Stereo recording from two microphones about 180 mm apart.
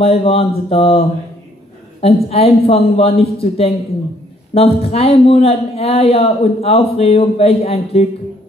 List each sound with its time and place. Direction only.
0.0 s a man's voice: 35° left (ahead or behind)